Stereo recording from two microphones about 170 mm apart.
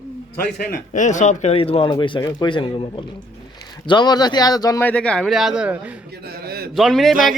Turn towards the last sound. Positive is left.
turn(degrees=0)  # may be behind; listen again after turning